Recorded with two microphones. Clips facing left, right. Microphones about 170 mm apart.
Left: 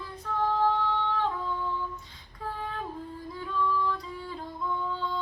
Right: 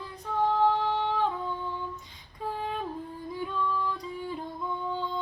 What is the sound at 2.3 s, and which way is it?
Female singing, 20° right (ahead or behind).